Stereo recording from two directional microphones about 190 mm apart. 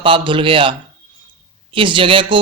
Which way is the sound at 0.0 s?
25° right (ahead or behind).